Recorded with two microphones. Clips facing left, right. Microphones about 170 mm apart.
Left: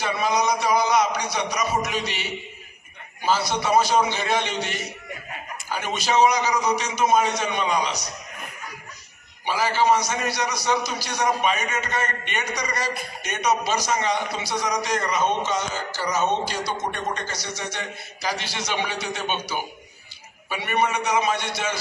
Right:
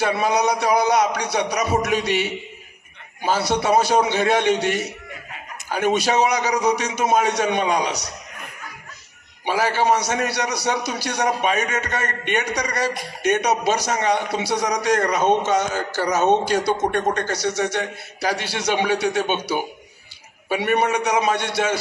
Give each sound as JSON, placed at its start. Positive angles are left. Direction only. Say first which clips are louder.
{"t": 0.0, "sound": "a sound", "louder": "right 3 dB", "side_deg": -60}
{"t": 3.3, "sound": "a man's voice", "louder": "right 3 dB", "side_deg": -60}
{"t": 9.5, "sound": "a man's voice", "louder": "right 1 dB", "side_deg": -60}